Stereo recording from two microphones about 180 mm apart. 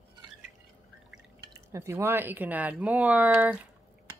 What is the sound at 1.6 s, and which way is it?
Speech, 15° right (ahead or behind).